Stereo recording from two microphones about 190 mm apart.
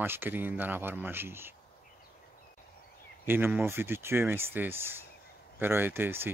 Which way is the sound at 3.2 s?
10° right (ahead or behind).